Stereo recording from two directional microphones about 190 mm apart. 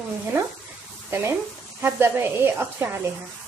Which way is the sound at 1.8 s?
10° right (ahead or behind).